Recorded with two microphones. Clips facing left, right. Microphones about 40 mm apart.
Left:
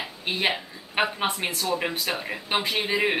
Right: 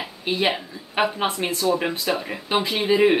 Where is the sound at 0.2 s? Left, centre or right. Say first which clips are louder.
Right 3 dB; centre.